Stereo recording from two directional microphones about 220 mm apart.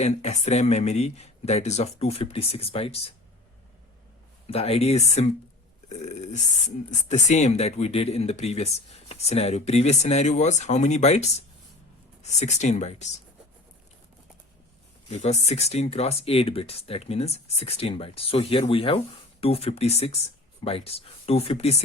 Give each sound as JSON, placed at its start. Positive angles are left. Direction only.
{"t": 0.0, "sound": "speech", "side_deg": 30}
{"t": 4.4, "sound": "speech", "side_deg": 25}
{"t": 15.1, "sound": "speech", "side_deg": 30}